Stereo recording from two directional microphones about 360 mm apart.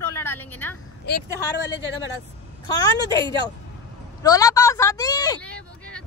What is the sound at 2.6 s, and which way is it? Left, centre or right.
Speech, centre.